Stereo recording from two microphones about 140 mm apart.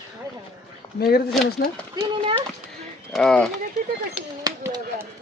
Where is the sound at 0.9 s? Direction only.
90° left.